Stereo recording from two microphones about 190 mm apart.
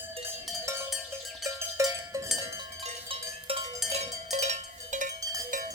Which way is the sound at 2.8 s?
30° right (ahead or behind).